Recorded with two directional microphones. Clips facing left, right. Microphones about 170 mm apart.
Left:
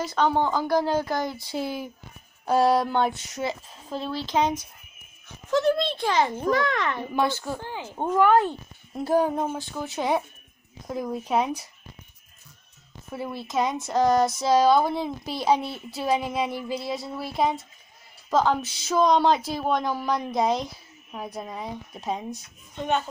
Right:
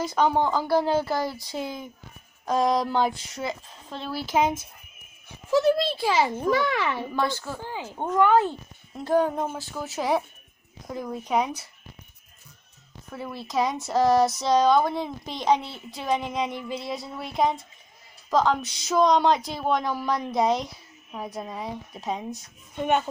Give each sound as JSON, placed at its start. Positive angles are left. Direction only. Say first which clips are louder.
{"t": 0.0, "sound": "speech", "louder": "right 1 dB", "side_deg": -10}
{"t": 2.4, "sound": "speech", "louder": "left 2 dB", "side_deg": 5}
{"t": 4.1, "sound": "speech", "louder": "right 1 dB", "side_deg": -10}
{"t": 7.2, "sound": "a woman's voice", "louder": "left 4 dB", "side_deg": 20}
{"t": 7.5, "sound": "speech", "louder": "even", "side_deg": -5}
{"t": 7.9, "sound": "speech", "louder": "left 1 dB", "side_deg": 10}
{"t": 9.6, "sound": "speech", "louder": "left 1 dB", "side_deg": -5}
{"t": 13.1, "sound": "speech", "louder": "left 1 dB", "side_deg": 5}